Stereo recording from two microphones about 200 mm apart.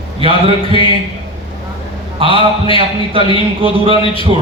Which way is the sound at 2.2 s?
25° right (ahead or behind).